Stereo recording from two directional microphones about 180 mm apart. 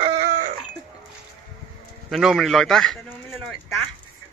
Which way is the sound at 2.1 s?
Centre (ahead or behind).